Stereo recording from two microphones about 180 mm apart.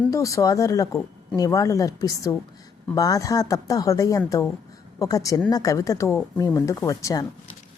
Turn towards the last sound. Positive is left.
turn(degrees=20)  # may be behind; listen again after turning